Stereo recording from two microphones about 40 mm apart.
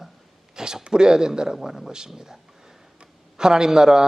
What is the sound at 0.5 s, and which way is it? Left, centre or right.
A man's voice, centre.